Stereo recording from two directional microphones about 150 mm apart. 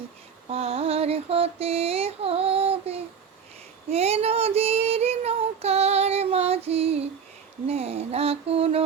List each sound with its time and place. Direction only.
0.5 s a sound: 40° right (ahead or behind)
3.8 s child singing: 45° right (ahead or behind)
6.7 s female singing: 40° right (ahead or behind)
7.7 s mantra: 45° right (ahead or behind)